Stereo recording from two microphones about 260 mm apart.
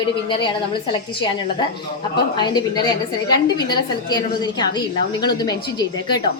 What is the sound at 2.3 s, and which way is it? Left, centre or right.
A woman's voice, centre.